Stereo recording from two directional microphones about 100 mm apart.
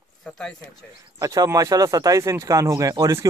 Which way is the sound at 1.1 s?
35° right (ahead or behind).